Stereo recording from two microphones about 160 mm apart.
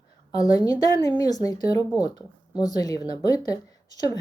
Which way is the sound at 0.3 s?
25° left (ahead or behind).